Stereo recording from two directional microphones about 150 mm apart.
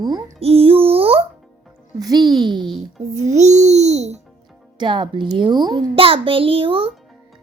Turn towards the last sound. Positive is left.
turn(degrees=-35)  # may be behind; listen again after turning